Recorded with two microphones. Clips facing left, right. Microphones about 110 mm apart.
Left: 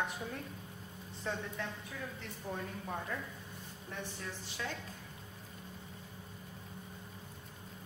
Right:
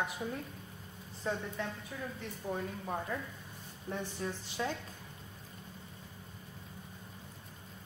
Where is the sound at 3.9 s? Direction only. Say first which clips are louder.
Right 6 dB; 30° right (ahead or behind).